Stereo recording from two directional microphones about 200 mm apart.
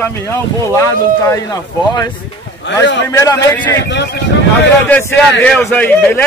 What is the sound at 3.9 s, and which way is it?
Speech, 55° left (ahead or behind).